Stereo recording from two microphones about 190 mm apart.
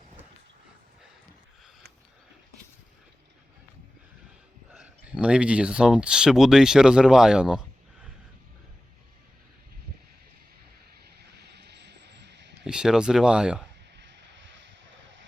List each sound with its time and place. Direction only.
4.7 s speech: 5° right (ahead or behind)
11.0 s a sound: 60° right (ahead or behind)
12.6 s speech: 5° right (ahead or behind)